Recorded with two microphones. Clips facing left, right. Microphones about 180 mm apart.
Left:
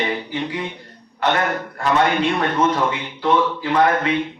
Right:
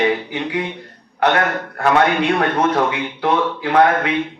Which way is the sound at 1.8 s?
65° right (ahead or behind).